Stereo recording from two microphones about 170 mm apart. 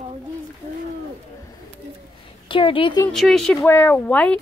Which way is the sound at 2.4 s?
30° left (ahead or behind).